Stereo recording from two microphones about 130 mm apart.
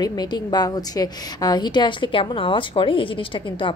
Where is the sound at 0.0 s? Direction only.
30° left (ahead or behind).